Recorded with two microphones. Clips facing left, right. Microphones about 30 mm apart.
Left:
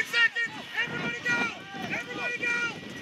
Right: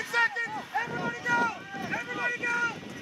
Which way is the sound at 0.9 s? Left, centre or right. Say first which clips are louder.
Right 2 dB; left.